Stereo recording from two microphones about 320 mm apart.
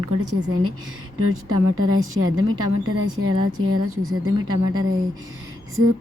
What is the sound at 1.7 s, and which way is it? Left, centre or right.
Speech, right.